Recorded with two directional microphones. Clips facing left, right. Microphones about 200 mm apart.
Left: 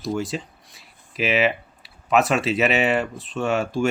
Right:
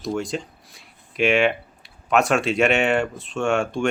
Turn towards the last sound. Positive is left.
turn(degrees=5)  # may be behind; listen again after turning